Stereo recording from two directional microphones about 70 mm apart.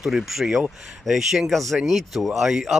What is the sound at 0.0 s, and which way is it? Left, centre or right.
Speech, centre.